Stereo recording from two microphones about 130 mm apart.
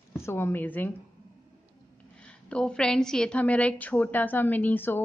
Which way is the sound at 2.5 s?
5° left (ahead or behind).